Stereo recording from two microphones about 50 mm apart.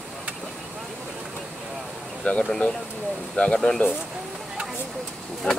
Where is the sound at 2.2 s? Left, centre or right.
Left.